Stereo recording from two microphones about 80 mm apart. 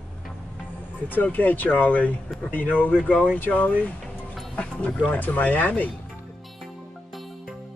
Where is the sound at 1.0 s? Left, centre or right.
Left.